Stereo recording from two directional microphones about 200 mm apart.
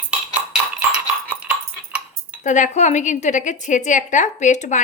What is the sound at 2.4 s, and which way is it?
A woman's voice, 40° left (ahead or behind).